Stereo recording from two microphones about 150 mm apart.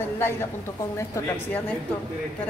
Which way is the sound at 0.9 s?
20° left (ahead or behind).